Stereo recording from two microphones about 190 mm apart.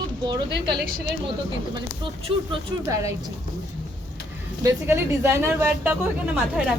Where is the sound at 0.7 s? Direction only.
60° right (ahead or behind).